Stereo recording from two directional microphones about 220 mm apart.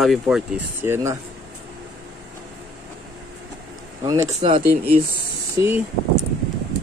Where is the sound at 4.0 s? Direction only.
20° right (ahead or behind).